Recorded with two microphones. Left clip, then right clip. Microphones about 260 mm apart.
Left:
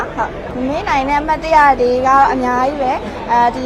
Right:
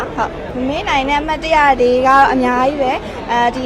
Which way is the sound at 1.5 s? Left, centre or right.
Centre.